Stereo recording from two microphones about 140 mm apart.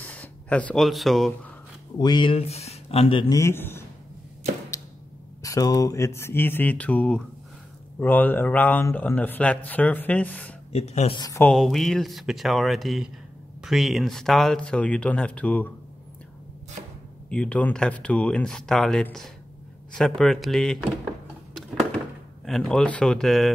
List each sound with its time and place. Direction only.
0.0 s a sound: 10° left (ahead or behind)
0.8 s speech: centre (ahead or behind)
2.0 s speech: 35° left (ahead or behind)
3.3 s a man's voice: 20° left (ahead or behind)
5.4 s speech: 25° left (ahead or behind)
10.7 s speech: 50° left (ahead or behind)
11.5 s speech: centre (ahead or behind)
17.3 s speech: 10° left (ahead or behind)
22.4 s speech: 5° left (ahead or behind)